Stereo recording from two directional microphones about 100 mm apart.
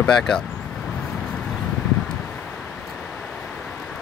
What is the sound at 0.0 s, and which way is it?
Speech, 5° left (ahead or behind).